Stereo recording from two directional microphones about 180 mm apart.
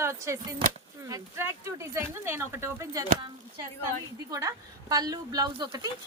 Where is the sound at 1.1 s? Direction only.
15° right (ahead or behind).